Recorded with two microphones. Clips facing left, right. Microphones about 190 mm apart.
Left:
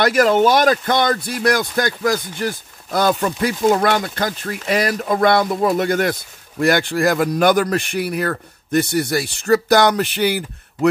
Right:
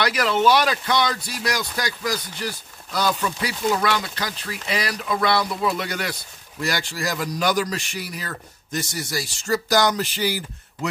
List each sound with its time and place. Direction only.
0.0 s speech: 45° left (ahead or behind)